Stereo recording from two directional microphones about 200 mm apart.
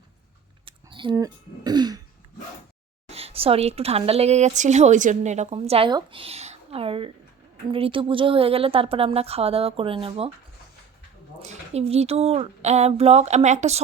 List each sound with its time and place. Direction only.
0.6 s speech: 25° right (ahead or behind)
3.1 s a woman's voice: 30° right (ahead or behind)
11.3 s speech: 30° right (ahead or behind)